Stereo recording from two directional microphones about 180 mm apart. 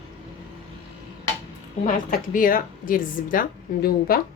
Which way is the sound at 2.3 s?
50° left (ahead or behind).